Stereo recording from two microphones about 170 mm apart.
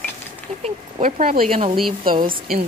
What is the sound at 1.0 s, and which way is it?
Speech, 55° right (ahead or behind).